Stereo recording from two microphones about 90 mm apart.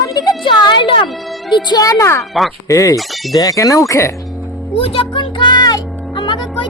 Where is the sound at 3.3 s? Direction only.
40° left (ahead or behind).